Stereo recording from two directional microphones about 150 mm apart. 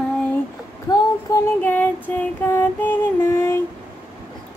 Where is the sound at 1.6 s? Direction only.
10° left (ahead or behind).